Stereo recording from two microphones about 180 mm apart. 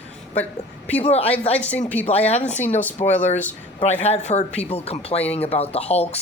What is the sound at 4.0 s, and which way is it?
Speech, 35° left (ahead or behind).